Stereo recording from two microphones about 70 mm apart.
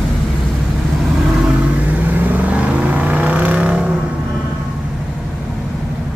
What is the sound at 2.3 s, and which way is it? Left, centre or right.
Vehicle, centre.